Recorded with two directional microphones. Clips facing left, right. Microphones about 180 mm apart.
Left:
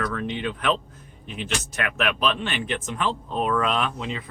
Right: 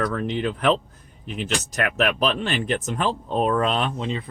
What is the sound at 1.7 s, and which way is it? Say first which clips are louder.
Speech: right 4 dB; 40° right (ahead or behind).